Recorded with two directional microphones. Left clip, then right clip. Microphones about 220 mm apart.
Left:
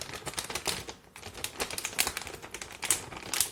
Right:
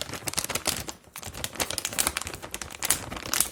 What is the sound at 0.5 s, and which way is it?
Typewriter, 40° right (ahead or behind).